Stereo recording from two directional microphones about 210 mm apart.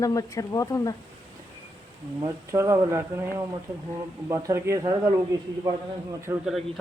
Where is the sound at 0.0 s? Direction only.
15° left (ahead or behind).